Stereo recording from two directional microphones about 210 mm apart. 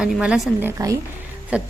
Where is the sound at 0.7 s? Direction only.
15° right (ahead or behind).